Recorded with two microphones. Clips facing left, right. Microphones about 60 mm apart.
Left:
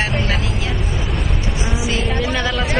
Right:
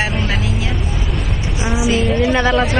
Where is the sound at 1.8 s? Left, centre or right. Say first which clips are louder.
Right 6 dB; centre.